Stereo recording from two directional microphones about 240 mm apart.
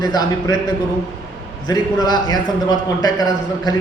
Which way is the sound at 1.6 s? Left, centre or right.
Centre.